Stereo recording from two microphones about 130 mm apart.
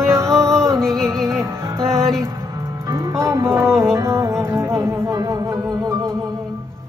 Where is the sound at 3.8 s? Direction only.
20° right (ahead or behind).